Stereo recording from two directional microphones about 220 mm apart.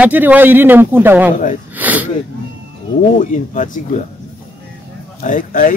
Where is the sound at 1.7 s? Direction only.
5° right (ahead or behind).